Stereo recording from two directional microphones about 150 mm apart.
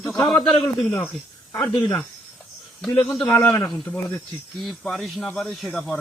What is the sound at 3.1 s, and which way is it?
A man's voice, centre (ahead or behind).